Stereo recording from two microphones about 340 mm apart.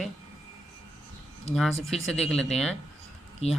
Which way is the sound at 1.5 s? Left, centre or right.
Centre.